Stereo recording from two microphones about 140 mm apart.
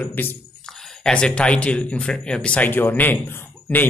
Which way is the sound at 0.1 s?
15° left (ahead or behind).